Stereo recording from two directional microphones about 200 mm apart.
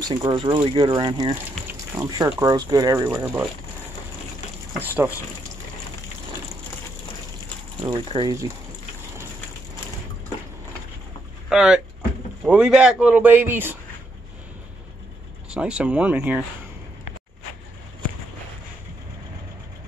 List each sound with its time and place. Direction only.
0.0 s speech: 20° right (ahead or behind)
4.8 s speech: 10° right (ahead or behind)
7.8 s speech: 25° right (ahead or behind)
11.4 s speech: 5° right (ahead or behind)
15.5 s speech: 5° right (ahead or behind)